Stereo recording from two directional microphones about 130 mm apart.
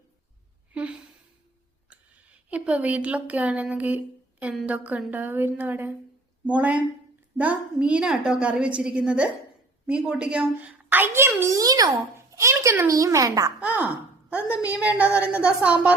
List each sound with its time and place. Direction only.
0.7 s a sound: 10° right (ahead or behind)
1.9 s a woman's voice: 10° right (ahead or behind); by 13.5 s 25° right (ahead or behind)
13.6 s a child's voice: 10° right (ahead or behind)